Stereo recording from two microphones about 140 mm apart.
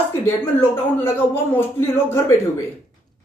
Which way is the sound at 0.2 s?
15° left (ahead or behind).